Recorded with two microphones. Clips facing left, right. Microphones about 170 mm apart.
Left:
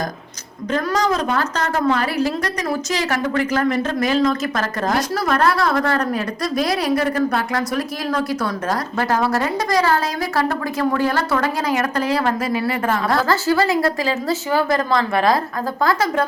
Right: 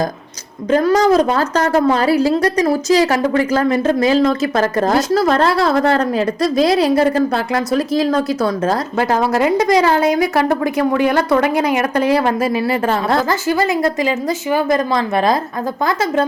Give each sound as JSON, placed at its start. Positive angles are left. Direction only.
{"t": 0.7, "sound": "a woman's voice", "side_deg": -30}